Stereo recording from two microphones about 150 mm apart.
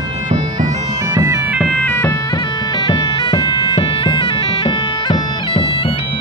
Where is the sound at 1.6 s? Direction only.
10° left (ahead or behind).